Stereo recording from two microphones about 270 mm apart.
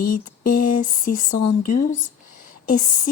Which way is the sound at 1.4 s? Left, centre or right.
Left.